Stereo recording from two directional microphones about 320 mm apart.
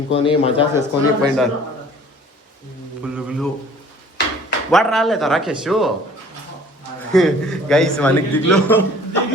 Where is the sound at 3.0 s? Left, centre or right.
Centre.